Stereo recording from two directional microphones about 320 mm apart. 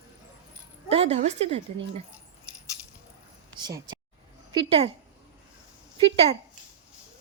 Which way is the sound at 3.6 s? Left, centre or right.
Centre.